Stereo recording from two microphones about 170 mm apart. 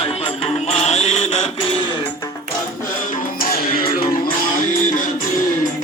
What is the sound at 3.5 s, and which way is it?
Music, 60° left (ahead or behind).